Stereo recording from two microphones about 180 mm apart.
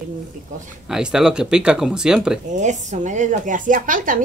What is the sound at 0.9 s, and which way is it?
Speech, 5° right (ahead or behind).